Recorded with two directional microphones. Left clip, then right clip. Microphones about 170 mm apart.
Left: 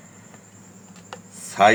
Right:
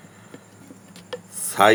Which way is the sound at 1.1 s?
40° right (ahead or behind).